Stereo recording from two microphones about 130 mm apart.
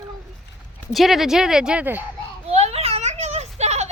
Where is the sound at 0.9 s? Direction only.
Centre (ahead or behind).